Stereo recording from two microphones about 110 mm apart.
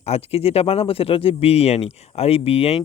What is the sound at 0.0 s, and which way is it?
Speech, 65° left (ahead or behind).